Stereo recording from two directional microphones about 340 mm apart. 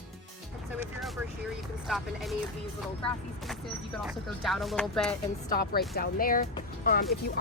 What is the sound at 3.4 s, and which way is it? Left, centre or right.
Speech, centre.